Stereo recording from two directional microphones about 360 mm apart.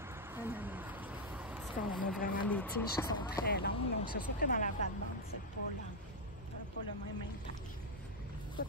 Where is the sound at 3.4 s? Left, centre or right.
Left.